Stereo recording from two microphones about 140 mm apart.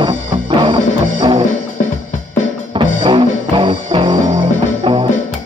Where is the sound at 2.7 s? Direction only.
35° right (ahead or behind).